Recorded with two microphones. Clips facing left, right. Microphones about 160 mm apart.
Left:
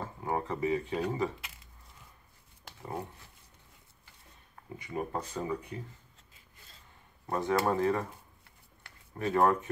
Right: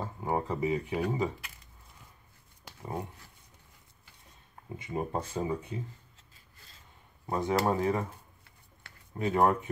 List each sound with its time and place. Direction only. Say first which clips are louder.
0.0 s speech: right 2 dB; 15° right (ahead or behind)
2.8 s speech: right 1 dB; 5° right (ahead or behind)
4.7 s speech: right 2 dB; 25° right (ahead or behind)
7.2 s speech: right 1 dB; 15° right (ahead or behind)
9.2 s speech: right 1 dB; 15° right (ahead or behind)